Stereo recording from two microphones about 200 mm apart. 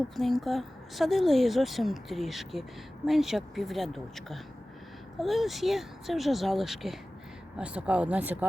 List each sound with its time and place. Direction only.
0.2 s speech: centre (ahead or behind)